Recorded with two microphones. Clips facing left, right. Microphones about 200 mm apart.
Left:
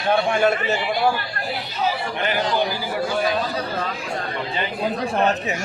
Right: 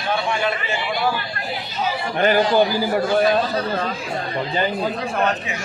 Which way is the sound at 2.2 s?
45° right (ahead or behind).